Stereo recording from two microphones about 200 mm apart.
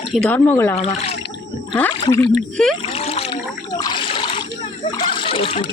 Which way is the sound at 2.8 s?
30° left (ahead or behind).